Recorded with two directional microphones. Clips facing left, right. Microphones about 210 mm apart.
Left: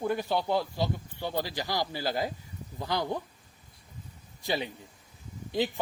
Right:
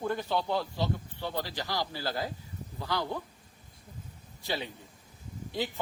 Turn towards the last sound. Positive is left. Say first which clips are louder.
# left 4 dB
turn(degrees=15)  # may be behind; listen again after turning